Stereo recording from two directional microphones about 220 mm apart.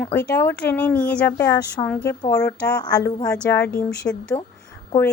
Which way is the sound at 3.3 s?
5° left (ahead or behind).